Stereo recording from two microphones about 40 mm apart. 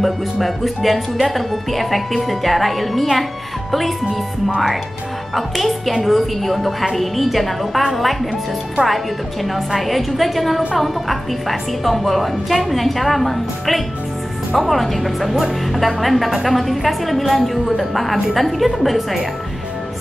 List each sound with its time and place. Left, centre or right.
0.0 s a woman's voice: centre
5.3 s a woman's voice: centre